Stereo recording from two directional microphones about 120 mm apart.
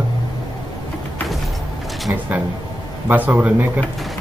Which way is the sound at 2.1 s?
20° right (ahead or behind).